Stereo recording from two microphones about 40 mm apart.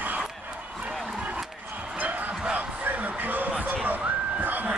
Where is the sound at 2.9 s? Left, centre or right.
Right.